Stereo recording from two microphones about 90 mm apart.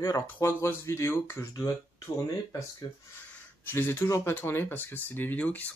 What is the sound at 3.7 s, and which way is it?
Speech, 25° left (ahead or behind).